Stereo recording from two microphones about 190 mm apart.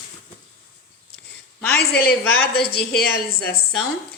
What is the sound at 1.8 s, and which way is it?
Speech, 55° left (ahead or behind).